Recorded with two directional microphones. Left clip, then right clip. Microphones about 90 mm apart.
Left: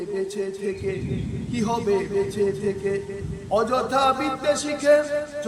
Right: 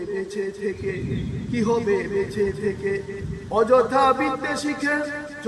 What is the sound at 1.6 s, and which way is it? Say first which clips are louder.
A man's voice: right 1 dB; 30° left (ahead or behind).